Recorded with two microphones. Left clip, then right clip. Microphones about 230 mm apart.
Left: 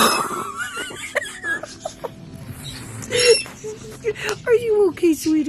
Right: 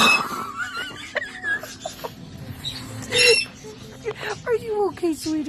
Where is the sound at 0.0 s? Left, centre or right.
Centre.